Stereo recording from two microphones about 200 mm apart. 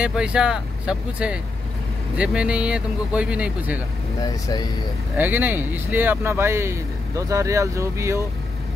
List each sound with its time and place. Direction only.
0.0 s speech: 5° right (ahead or behind)
4.2 s speech: 20° left (ahead or behind)
5.1 s speech: 10° right (ahead or behind)